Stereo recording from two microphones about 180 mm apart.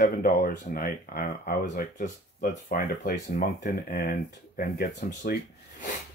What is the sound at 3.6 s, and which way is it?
Speech, 55° left (ahead or behind).